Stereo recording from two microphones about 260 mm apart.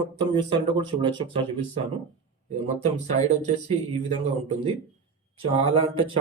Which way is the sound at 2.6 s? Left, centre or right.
Right.